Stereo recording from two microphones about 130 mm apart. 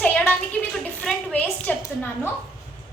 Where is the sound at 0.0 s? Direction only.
10° left (ahead or behind).